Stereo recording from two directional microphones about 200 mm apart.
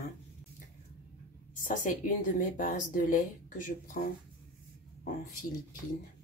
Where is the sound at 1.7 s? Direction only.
40° left (ahead or behind).